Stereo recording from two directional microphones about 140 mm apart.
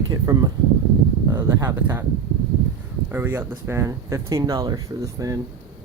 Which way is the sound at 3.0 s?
15° right (ahead or behind).